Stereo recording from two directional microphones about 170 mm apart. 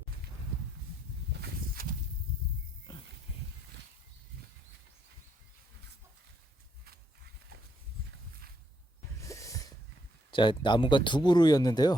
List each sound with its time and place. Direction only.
1.4 s walk: 60° right (ahead or behind)
9.2 s a sound: 20° left (ahead or behind)
10.3 s speech: 30° left (ahead or behind)